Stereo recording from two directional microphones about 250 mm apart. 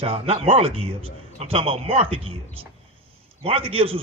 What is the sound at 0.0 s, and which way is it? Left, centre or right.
A man's voice, right.